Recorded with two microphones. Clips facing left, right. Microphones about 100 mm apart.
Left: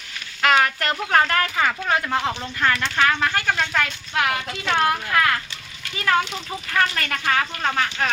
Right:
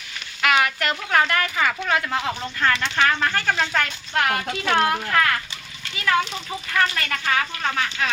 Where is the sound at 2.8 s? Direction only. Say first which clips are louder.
Even; centre (ahead or behind).